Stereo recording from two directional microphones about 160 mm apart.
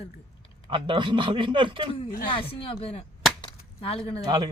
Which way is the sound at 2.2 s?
35° left (ahead or behind).